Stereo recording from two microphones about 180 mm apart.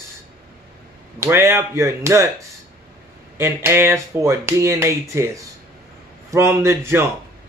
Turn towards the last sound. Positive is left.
turn(degrees=-15)  # may be behind; listen again after turning